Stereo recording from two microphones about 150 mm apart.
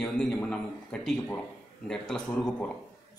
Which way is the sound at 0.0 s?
5° left (ahead or behind).